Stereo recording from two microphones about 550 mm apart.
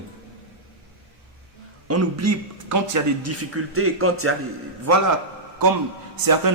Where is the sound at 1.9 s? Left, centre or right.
Right.